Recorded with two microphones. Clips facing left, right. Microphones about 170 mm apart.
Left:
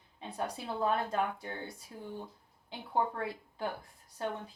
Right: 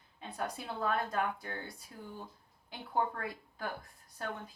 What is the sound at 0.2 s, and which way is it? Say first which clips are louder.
A woman's voice: left 2 dB; 25° left (ahead or behind).